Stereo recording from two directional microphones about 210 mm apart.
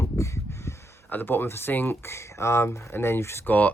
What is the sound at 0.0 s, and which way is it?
Speech, 15° left (ahead or behind).